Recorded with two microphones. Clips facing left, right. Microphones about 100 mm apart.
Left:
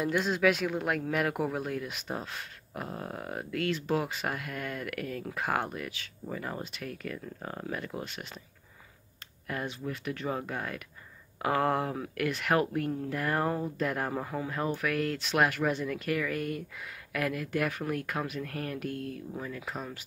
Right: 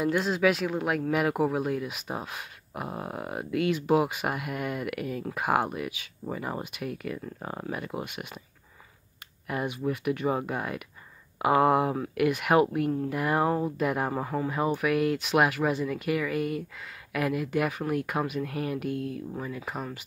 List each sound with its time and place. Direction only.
0.0 s speech: centre (ahead or behind)
9.5 s speech: 15° right (ahead or behind)